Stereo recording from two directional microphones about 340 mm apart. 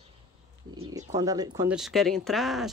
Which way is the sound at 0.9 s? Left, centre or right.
Centre.